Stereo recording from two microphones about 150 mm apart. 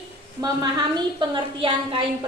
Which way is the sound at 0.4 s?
25° right (ahead or behind).